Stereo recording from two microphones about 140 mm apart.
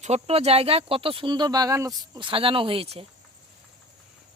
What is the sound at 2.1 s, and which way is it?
Speech, 35° right (ahead or behind).